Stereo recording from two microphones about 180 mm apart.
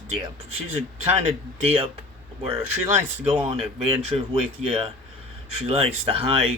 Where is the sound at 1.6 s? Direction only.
35° right (ahead or behind).